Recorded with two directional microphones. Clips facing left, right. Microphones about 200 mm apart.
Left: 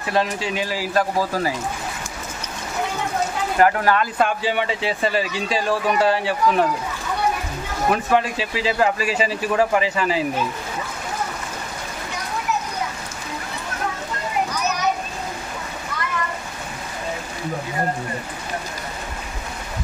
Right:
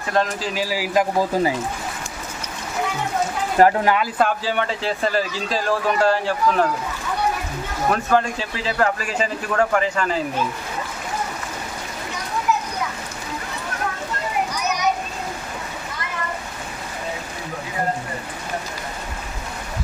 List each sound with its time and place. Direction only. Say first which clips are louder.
0.1 s speech: even; centre (ahead or behind); by 1.5 s 20° right (ahead or behind)
3.5 s speech: right 2 dB; 30° right (ahead or behind)
3.8 s speech: even; 10° right (ahead or behind)
4.2 s speech: even; 5° left (ahead or behind)
7.9 s speech: even; 5° left (ahead or behind)